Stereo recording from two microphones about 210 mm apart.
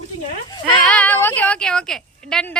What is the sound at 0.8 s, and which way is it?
A woman's voice, 5° left (ahead or behind).